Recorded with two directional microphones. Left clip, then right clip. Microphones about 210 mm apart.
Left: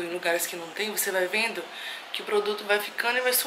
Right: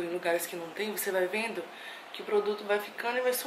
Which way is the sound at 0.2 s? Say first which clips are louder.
Left 5 dB; 5° right (ahead or behind).